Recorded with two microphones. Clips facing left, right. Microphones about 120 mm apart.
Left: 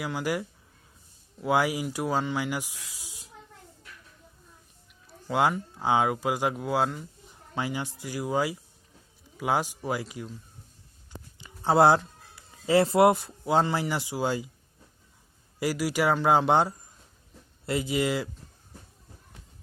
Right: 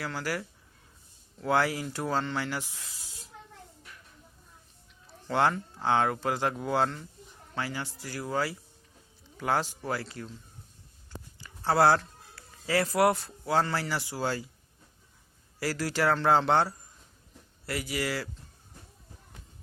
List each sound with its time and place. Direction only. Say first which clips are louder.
0.0 s speech: left 4 dB; 15° left (ahead or behind)
5.3 s speech: left 1 dB; 10° left (ahead or behind)
11.3 s speech: left 3 dB; 20° left (ahead or behind)
15.5 s speech: left 3 dB; 15° left (ahead or behind)